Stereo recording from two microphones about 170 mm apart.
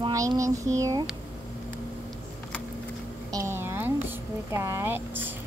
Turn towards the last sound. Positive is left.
turn(degrees=-10)  # may be behind; listen again after turning